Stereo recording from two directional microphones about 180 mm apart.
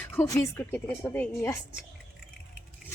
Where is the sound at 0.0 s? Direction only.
10° left (ahead or behind).